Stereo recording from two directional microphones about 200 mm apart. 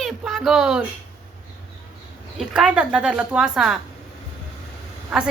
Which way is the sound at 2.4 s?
5° right (ahead or behind).